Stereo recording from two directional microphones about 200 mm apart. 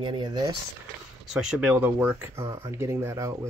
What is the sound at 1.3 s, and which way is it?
Speech, 5° right (ahead or behind).